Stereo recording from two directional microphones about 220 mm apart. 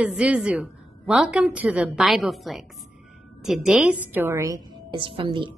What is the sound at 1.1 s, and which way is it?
A woman's voice, 5° right (ahead or behind).